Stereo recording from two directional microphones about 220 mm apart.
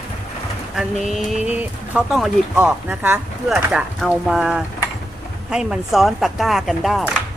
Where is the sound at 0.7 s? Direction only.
Centre (ahead or behind).